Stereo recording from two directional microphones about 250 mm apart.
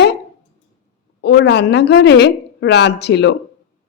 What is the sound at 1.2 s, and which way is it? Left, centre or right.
A woman's voice, left.